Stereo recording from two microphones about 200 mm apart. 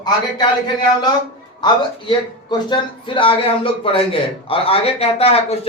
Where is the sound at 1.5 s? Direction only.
25° left (ahead or behind).